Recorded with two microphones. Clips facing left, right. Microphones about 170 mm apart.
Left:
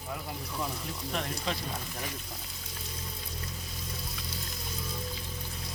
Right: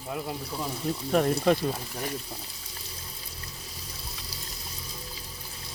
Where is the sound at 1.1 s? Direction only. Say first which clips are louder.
Right 12 dB; 45° right (ahead or behind).